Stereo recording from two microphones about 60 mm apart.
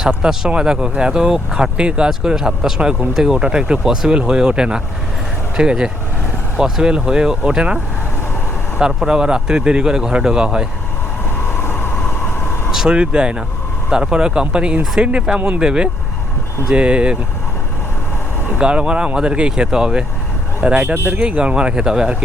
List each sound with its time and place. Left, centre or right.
0.2 s speech: centre
8.8 s speech: centre
11.6 s vehicle: left
12.7 s speech: centre
18.5 s speech: centre
20.8 s speech: right
21.2 s speech: centre